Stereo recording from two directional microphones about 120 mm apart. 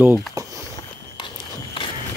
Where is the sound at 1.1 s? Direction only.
45° left (ahead or behind).